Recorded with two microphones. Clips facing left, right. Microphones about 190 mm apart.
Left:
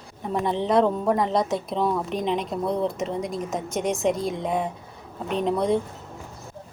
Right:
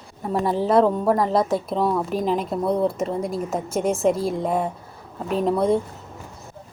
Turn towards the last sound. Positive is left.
turn(degrees=0)  # may be behind; listen again after turning